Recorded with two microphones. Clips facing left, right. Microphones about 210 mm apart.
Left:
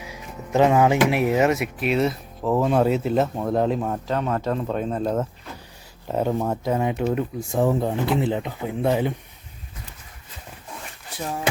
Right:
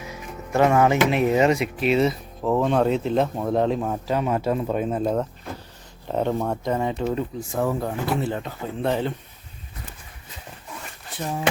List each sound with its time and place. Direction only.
0.0 s speech: 15° left (ahead or behind)